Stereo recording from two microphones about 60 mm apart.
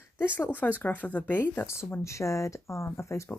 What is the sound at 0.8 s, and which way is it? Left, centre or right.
Speech, left.